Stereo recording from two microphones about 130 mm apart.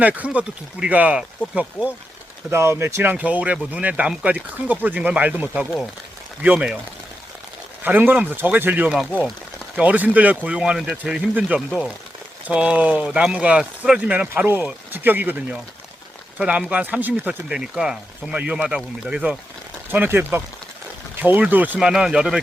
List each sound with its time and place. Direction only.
0.0 s speech: 10° right (ahead or behind)
2.5 s speech: 20° right (ahead or behind)
7.9 s speech: 15° right (ahead or behind)